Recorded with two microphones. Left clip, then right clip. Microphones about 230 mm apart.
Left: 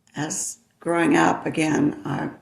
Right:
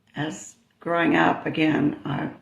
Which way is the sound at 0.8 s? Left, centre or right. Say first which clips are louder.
Left 1 dB; left.